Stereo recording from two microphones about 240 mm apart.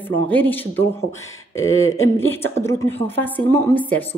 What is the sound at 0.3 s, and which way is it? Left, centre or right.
Speech, centre.